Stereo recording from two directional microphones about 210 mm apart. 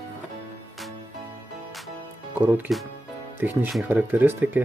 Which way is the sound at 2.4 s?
5° right (ahead or behind).